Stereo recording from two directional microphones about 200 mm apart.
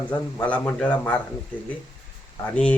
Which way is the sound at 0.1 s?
5° left (ahead or behind).